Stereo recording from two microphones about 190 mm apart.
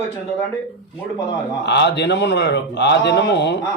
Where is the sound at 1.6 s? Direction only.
65° left (ahead or behind).